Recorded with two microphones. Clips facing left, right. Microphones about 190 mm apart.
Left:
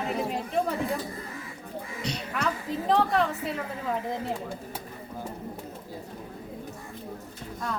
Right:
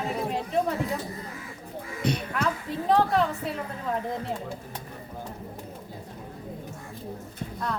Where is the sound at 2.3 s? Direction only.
Centre (ahead or behind).